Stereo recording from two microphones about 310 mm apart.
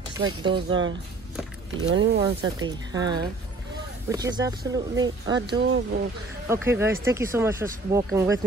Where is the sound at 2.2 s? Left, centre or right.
Centre.